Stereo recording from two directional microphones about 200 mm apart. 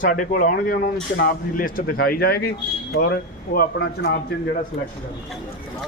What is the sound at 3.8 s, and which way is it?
Speech, 60° left (ahead or behind).